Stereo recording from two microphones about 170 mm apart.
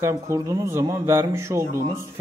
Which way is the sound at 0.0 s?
20° right (ahead or behind).